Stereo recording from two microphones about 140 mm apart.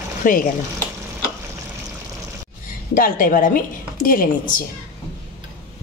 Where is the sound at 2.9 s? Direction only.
85° left.